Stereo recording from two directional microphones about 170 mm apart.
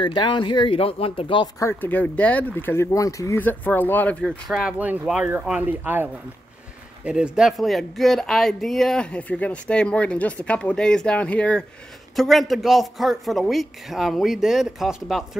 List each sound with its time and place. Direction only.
0.0 s speech: 25° left (ahead or behind)
1.6 s speech: 10° left (ahead or behind); by 6.0 s 10° right (ahead or behind)
7.1 s speech: 5° right (ahead or behind)